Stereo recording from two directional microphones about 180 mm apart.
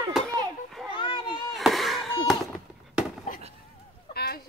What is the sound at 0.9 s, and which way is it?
Children playing, 25° left (ahead or behind).